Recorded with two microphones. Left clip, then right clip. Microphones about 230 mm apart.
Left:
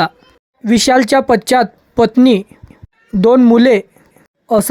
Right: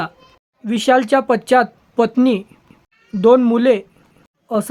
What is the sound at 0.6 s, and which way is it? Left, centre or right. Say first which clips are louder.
Speech: left 3 dB; left.